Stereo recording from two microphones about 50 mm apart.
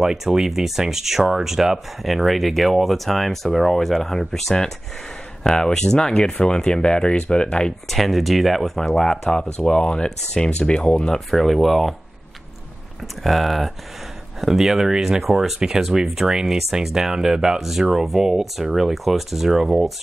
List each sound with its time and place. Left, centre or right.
0.0 s speech: centre
7.9 s speech: centre
11.1 s speech: centre
13.2 s speech: centre